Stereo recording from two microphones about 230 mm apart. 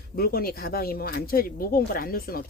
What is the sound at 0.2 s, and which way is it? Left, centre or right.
Speech, left.